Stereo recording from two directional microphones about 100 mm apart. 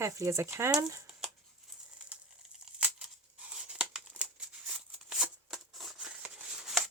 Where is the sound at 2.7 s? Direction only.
10° right (ahead or behind).